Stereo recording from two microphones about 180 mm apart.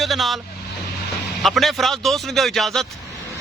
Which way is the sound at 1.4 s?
Centre (ahead or behind).